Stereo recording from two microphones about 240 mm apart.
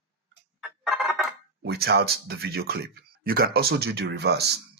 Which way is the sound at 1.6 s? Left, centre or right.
Right.